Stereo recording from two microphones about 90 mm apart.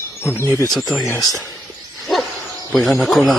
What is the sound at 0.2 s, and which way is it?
Speech, 25° left (ahead or behind).